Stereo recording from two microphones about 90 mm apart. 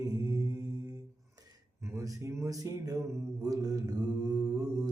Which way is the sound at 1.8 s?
35° right (ahead or behind).